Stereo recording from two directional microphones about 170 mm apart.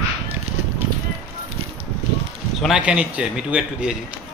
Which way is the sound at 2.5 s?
5° right (ahead or behind).